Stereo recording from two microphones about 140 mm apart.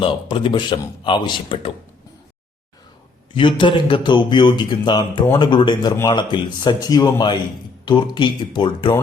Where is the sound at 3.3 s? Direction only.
35° left (ahead or behind).